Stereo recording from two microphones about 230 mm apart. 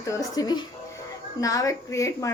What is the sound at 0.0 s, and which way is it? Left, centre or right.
A woman's voice, centre.